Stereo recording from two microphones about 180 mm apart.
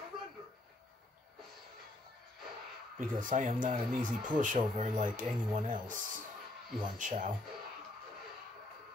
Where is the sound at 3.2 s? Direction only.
45° right (ahead or behind).